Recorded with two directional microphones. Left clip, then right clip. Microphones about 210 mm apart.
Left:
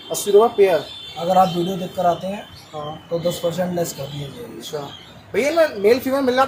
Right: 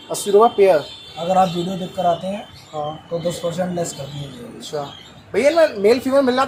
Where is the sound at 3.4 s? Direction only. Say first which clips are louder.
Left 2 dB; 15° left (ahead or behind).